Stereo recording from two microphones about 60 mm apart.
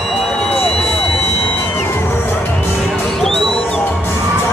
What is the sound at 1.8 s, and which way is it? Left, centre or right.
Music, left.